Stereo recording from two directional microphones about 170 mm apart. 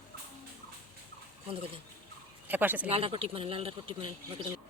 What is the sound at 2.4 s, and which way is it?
Speech, 10° right (ahead or behind).